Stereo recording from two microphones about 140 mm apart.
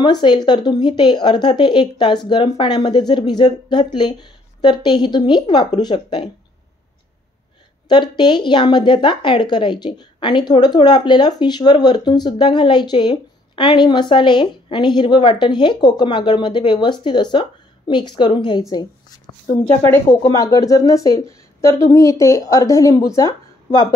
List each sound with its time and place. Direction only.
0.0 s a woman's voice: 30° left (ahead or behind)
7.9 s a woman's voice: 35° left (ahead or behind)
19.8 s speech: 15° left (ahead or behind)
20.3 s a woman's voice: 25° left (ahead or behind)